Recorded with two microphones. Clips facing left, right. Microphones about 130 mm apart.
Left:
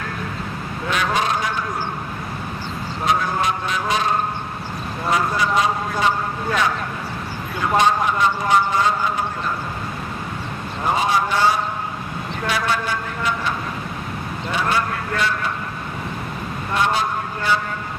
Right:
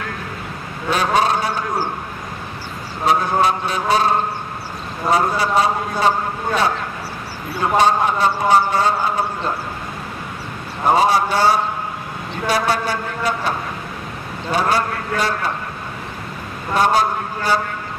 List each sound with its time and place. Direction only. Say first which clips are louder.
0.8 s a sound: right 4 dB; 35° right (ahead or behind)
3.1 s a man's voice: right 4 dB; 35° right (ahead or behind)
5.1 s a man's voice: right 3 dB; 35° right (ahead or behind)
7.7 s a man's voice: right 2 dB; 35° right (ahead or behind)
11.0 s a man's voice: right 2 dB; 35° right (ahead or behind)
16.7 s a man's voice: right 5 dB; 40° right (ahead or behind)